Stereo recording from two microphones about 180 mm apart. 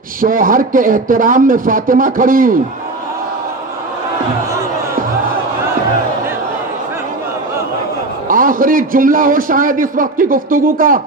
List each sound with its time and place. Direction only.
0.2 s a man's voice: 50° right (ahead or behind)
8.3 s a man's voice: 50° right (ahead or behind)